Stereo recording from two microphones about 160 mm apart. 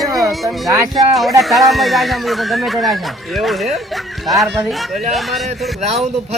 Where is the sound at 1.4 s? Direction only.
Centre (ahead or behind).